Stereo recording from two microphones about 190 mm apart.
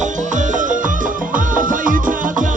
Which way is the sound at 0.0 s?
40° right (ahead or behind).